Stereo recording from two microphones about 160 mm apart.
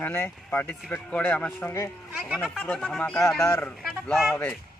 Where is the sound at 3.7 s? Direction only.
Centre (ahead or behind).